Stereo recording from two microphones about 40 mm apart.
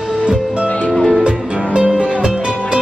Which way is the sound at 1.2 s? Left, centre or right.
Right.